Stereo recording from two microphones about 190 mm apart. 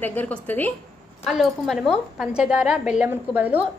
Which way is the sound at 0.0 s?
10° left (ahead or behind).